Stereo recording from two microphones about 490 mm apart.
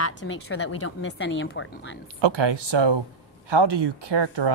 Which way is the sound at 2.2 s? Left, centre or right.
Right.